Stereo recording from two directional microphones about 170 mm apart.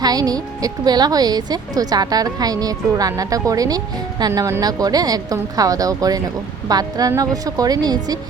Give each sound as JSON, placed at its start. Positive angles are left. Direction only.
{"t": 0.0, "sound": "a woman's voice", "side_deg": -20}